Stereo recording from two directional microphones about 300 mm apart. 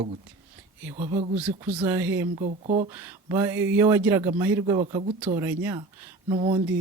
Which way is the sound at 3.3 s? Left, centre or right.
Centre.